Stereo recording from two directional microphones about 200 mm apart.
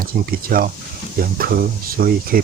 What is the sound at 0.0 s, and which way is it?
Speech, 45° right (ahead or behind).